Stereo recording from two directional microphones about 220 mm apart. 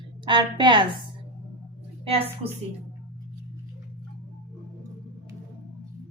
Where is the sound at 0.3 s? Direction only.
20° right (ahead or behind).